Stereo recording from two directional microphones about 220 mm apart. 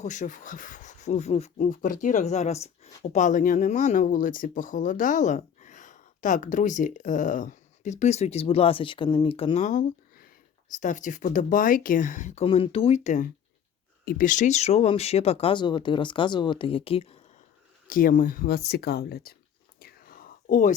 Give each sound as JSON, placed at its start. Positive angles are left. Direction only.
{"t": 0.0, "sound": "speech", "side_deg": 35}
{"t": 17.8, "sound": "speech", "side_deg": 40}
{"t": 19.8, "sound": "whispering", "side_deg": 40}